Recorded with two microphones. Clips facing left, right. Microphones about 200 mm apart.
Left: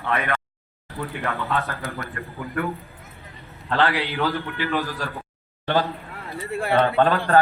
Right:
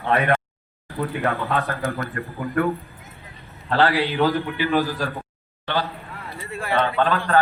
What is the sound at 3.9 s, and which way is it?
Speech, 15° right (ahead or behind).